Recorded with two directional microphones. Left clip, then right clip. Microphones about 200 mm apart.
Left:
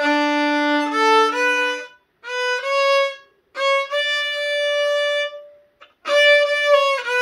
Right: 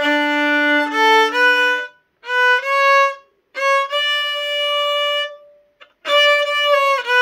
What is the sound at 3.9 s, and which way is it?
Violin, 40° right (ahead or behind).